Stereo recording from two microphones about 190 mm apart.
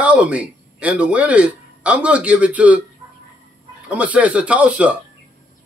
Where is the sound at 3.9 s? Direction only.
5° right (ahead or behind).